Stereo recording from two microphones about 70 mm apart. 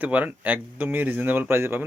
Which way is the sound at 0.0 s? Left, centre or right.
Right.